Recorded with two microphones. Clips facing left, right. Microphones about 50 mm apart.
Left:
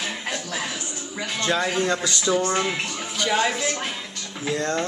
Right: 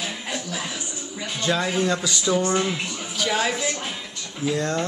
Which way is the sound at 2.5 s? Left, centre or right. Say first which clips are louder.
Right 1 dB; left.